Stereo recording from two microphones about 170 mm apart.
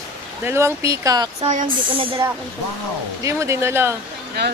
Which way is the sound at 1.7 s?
30° right (ahead or behind).